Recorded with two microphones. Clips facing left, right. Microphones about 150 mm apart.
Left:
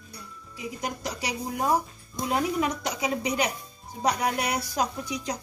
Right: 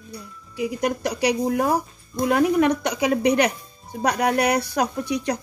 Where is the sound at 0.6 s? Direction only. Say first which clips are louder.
Right 10 dB; 65° right (ahead or behind).